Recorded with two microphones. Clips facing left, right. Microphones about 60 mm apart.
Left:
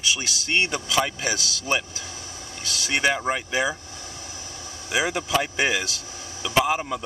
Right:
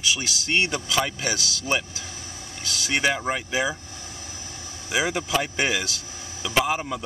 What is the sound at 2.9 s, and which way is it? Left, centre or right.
Speech, centre.